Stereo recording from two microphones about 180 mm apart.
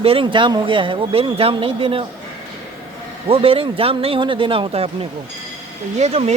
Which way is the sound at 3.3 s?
30° right (ahead or behind).